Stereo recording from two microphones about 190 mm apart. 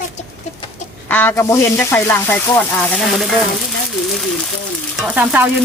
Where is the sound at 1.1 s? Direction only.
10° left (ahead or behind).